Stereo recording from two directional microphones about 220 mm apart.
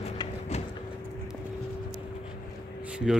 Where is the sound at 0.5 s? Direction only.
30° left (ahead or behind).